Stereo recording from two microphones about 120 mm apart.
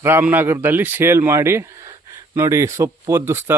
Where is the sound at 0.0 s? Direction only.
20° right (ahead or behind).